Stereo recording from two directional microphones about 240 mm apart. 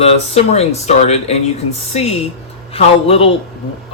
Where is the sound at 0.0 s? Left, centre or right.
Left.